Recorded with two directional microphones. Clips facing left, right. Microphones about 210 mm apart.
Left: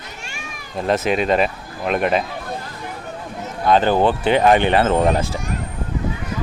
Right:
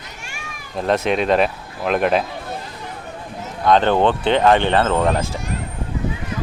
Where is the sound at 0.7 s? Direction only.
Centre (ahead or behind).